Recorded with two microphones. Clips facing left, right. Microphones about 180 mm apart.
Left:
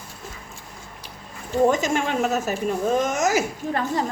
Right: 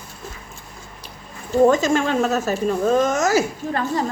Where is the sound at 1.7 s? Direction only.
15° left (ahead or behind).